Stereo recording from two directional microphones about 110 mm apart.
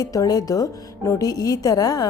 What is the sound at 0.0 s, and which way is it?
A woman's voice, 35° left (ahead or behind).